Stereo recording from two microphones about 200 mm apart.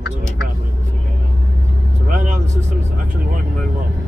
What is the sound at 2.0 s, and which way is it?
Vehicle, 40° right (ahead or behind).